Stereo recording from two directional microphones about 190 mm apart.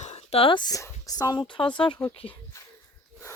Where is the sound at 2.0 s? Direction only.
10° left (ahead or behind).